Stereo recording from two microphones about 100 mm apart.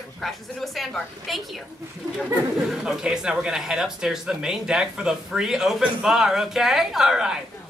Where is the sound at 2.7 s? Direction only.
5° right (ahead or behind).